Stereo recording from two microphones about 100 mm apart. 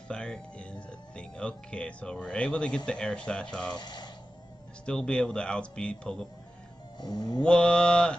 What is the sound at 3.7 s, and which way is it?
Speech, 45° left (ahead or behind).